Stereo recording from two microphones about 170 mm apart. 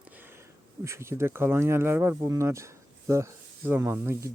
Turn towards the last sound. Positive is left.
turn(degrees=-15)  # may be behind; listen again after turning